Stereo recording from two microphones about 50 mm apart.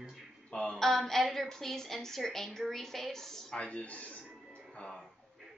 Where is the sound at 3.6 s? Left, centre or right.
Left.